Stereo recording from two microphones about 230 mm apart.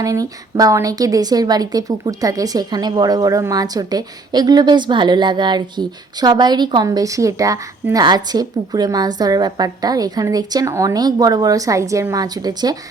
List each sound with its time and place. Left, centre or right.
0.0 s a woman's voice: centre